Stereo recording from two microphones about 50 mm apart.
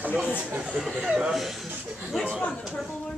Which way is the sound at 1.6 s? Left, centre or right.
Right.